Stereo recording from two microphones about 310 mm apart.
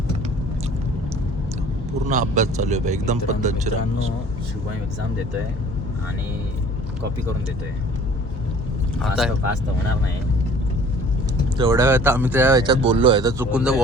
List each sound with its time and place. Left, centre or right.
2.0 s a man's voice: right
9.0 s speech: centre
11.5 s speech: centre